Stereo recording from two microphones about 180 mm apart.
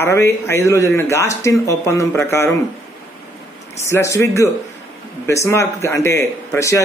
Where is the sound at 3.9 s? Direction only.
15° left (ahead or behind).